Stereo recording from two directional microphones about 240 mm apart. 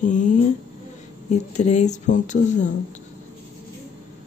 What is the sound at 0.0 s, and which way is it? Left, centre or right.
Speech, left.